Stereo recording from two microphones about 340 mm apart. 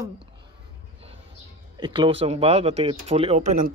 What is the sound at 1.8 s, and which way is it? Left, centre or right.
Speech, centre.